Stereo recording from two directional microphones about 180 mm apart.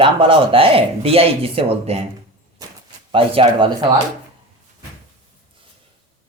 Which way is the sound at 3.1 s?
30° right (ahead or behind).